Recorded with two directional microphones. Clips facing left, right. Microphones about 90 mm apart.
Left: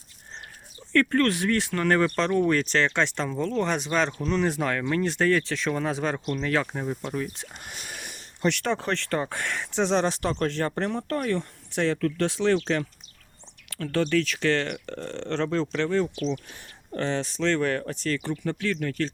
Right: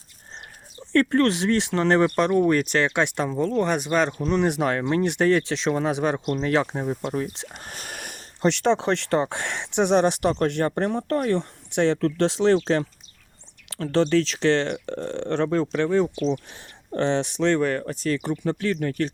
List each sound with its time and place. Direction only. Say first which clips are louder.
0.9 s speech: right 3 dB; 20° right (ahead or behind)
3.6 s speech: right 3 dB; 5° right (ahead or behind)
4.2 s speech: right 3 dB; 20° right (ahead or behind)
7.6 s a sound: right 3 dB; 45° right (ahead or behind)
8.4 s speech: right 5 dB; 20° right (ahead or behind)
17.7 s speech: right 2 dB; 5° right (ahead or behind)
18.1 s speech: right 4 dB; 15° right (ahead or behind)